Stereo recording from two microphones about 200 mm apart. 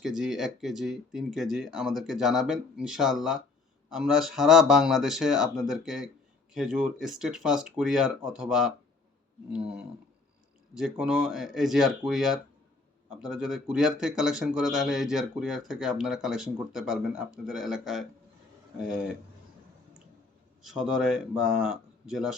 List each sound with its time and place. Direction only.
0.0 s speech: centre (ahead or behind)
20.6 s speech: centre (ahead or behind)